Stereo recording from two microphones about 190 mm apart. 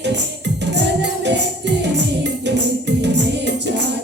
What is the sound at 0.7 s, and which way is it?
Music, 65° right (ahead or behind).